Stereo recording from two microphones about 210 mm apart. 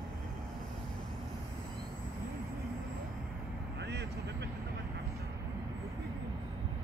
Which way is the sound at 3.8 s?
55° right (ahead or behind).